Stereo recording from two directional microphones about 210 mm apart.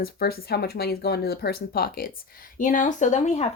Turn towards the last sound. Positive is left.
turn(degrees=30)  # may be behind; listen again after turning